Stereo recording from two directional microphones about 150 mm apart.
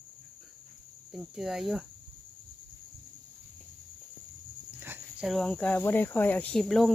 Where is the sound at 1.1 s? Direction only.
Centre (ahead or behind).